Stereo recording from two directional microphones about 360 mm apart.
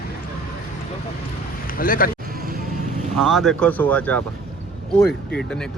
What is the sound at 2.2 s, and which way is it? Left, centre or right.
Music, right.